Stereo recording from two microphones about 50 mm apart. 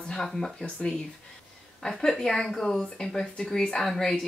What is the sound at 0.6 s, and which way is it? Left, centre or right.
Speech, centre.